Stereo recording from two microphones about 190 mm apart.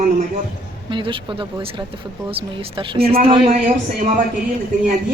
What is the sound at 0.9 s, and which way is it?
Speech, 25° right (ahead or behind).